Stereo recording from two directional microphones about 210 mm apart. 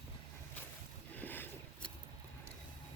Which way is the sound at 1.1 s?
10° left (ahead or behind).